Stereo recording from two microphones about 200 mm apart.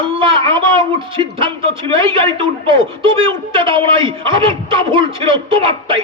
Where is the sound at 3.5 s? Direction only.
25° right (ahead or behind).